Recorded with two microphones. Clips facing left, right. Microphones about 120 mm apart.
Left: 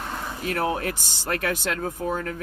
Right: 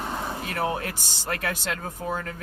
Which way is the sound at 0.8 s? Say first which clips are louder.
Left 4 dB; 50° left (ahead or behind).